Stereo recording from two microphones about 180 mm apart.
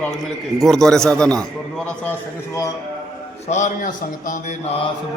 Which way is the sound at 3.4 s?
40° left (ahead or behind).